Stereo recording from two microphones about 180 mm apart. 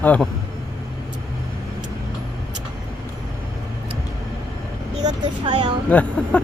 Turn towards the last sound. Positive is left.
turn(degrees=5)  # may be behind; listen again after turning